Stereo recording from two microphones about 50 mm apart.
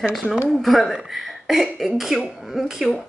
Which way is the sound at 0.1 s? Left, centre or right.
Centre.